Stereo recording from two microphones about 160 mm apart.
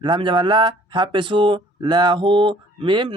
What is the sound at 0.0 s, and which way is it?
Speech, 30° right (ahead or behind).